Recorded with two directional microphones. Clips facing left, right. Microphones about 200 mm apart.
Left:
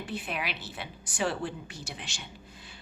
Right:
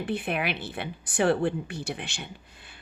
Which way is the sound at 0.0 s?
55° right (ahead or behind).